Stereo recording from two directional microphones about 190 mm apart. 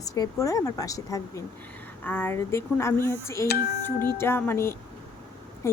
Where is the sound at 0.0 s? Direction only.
15° left (ahead or behind).